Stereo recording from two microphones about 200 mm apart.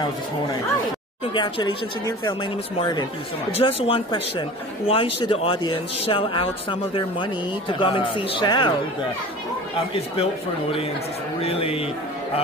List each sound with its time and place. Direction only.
1.3 s speech: 20° left (ahead or behind)
11.4 s speech: 30° left (ahead or behind)